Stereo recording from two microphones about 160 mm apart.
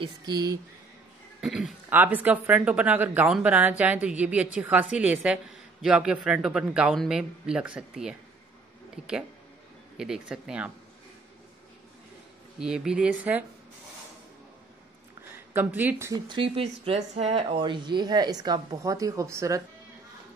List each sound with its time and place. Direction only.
0.0 s speech: 25° right (ahead or behind)
1.4 s speech: 5° right (ahead or behind)
12.5 s speech: 5° right (ahead or behind)
15.5 s speech: 10° right (ahead or behind)
16.3 s speech: 35° right (ahead or behind)